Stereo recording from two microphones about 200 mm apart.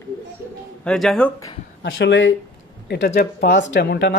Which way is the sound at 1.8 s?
65° left (ahead or behind).